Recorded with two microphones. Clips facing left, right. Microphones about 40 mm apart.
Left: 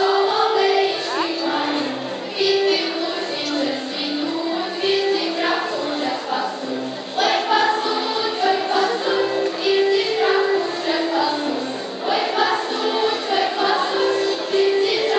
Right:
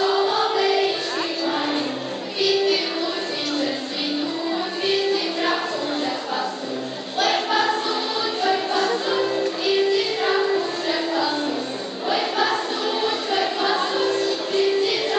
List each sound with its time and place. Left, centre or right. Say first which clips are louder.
0.0 s choir: left 3 dB; centre
1.4 s music: left 2 dB; centre
2.4 s child singing: left 2 dB; centre
4.8 s music: left 3 dB; centre
7.2 s choir: left 3 dB; centre
12.1 s music: left 2 dB; centre